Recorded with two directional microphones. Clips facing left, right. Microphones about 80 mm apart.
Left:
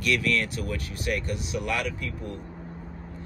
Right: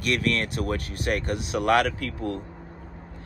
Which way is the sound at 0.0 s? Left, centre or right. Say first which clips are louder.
Even; right.